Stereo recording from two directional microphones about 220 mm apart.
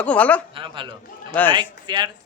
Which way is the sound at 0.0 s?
5° left (ahead or behind).